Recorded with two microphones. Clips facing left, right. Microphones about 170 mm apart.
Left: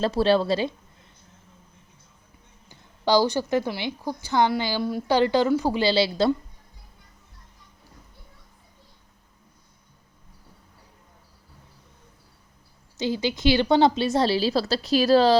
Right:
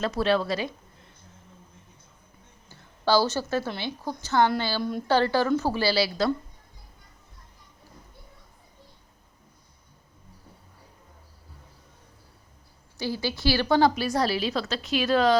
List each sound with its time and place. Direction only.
0.0 s a woman's voice: 30° left (ahead or behind)
2.6 s a woman's voice: 15° left (ahead or behind)
4.8 s speech: 5° left (ahead or behind)
5.0 s a woman's voice: 15° left (ahead or behind)
13.0 s a woman's voice: 20° left (ahead or behind)